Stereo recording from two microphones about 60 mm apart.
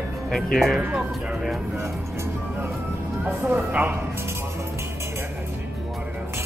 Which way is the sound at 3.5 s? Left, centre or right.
Right.